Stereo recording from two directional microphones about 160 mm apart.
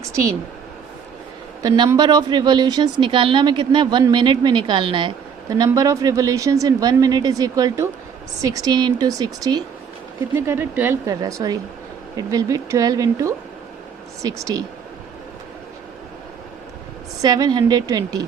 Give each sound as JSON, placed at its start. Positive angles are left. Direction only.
{"t": 1.6, "sound": "speech", "side_deg": -25}
{"t": 10.3, "sound": "speech", "side_deg": -15}
{"t": 17.2, "sound": "speech", "side_deg": -25}